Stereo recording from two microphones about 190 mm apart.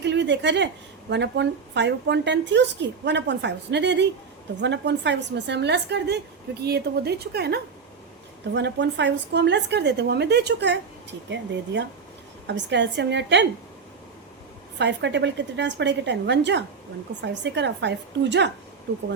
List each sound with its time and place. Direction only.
0.0 s a sound: 65° right (ahead or behind)
1.1 s a woman's voice: 65° right (ahead or behind)
14.8 s a woman's voice: 70° right (ahead or behind)